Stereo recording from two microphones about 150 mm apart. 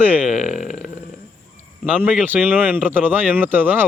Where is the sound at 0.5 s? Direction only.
55° left (ahead or behind).